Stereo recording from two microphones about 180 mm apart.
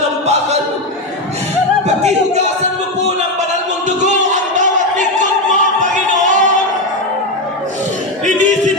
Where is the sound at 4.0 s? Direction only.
45° right (ahead or behind).